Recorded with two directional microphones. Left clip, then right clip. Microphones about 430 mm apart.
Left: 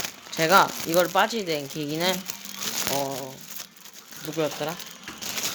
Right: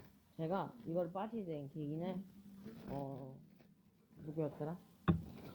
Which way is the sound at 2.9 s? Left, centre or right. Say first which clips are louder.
Left 14 dB; left.